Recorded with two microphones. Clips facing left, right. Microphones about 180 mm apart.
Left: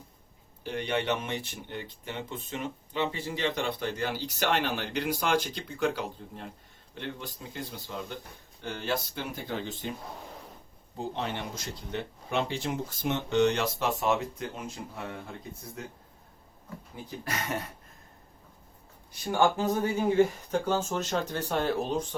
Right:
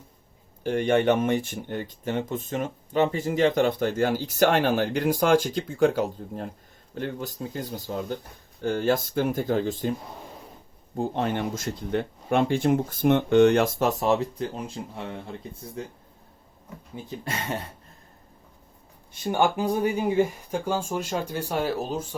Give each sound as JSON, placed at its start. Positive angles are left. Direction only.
{"t": 0.6, "sound": "speech", "side_deg": -45}
{"t": 10.9, "sound": "speech", "side_deg": -50}
{"t": 17.2, "sound": "speech", "side_deg": -30}
{"t": 19.1, "sound": "speech", "side_deg": -20}